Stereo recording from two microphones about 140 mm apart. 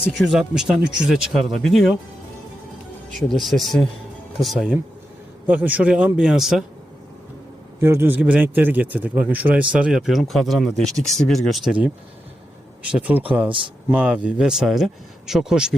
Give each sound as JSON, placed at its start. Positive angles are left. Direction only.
{"t": 0.0, "sound": "speech", "side_deg": -5}
{"t": 3.4, "sound": "a man's voice", "side_deg": 0}
{"t": 7.8, "sound": "a man's voice", "side_deg": -20}